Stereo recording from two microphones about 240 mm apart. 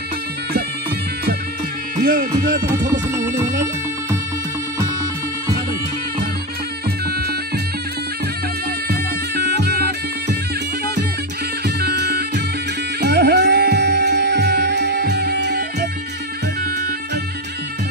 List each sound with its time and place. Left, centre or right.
8.8 s music: right
11.6 s music: right